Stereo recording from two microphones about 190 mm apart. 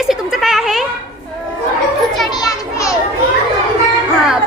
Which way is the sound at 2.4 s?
15° left (ahead or behind).